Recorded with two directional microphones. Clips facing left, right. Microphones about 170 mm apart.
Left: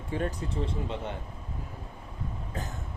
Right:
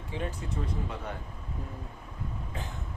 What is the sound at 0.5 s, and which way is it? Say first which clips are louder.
Speech: left 3 dB; 25° left (ahead or behind).